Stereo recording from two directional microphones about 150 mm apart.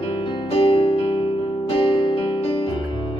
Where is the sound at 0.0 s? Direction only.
35° left (ahead or behind).